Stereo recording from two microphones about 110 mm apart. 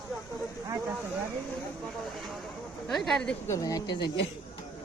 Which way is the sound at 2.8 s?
Centre (ahead or behind).